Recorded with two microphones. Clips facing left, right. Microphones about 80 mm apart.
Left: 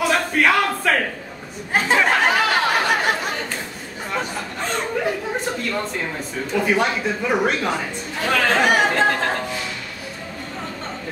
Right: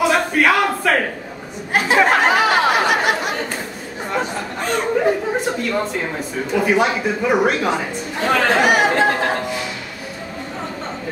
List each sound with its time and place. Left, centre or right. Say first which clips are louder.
0.0 s a sound: right 3 dB; centre
1.7 s chatter: right 3 dB; centre
2.1 s a sound: right 3 dB; centre
5.4 s speech: right 4 dB; centre
8.2 s chatter: right 3 dB; centre
8.5 s chatter: right 1 dB; centre